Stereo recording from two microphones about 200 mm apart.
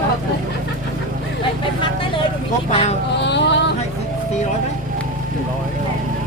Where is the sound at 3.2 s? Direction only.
60° left (ahead or behind).